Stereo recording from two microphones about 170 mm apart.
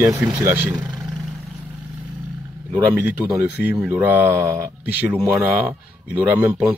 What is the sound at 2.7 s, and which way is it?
Speech, 10° right (ahead or behind).